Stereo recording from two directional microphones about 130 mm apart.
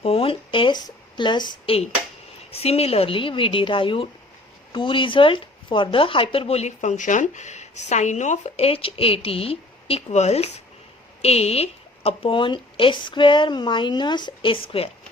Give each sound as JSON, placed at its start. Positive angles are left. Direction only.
{"t": 0.0, "sound": "a woman's voice", "side_deg": 50}
{"t": 2.5, "sound": "a woman's voice", "side_deg": 50}